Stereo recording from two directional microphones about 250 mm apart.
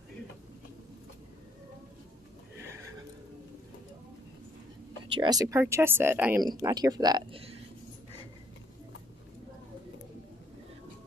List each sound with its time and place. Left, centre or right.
5.1 s speech: centre